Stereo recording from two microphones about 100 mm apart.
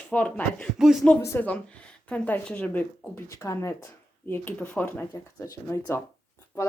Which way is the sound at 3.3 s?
30° left (ahead or behind).